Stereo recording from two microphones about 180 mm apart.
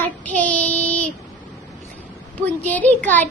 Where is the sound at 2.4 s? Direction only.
10° left (ahead or behind).